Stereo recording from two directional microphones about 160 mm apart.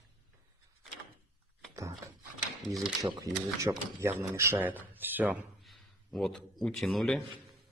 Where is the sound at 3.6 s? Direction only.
15° right (ahead or behind).